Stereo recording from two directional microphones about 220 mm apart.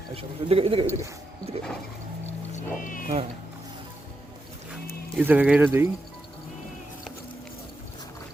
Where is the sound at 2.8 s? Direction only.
40° left (ahead or behind).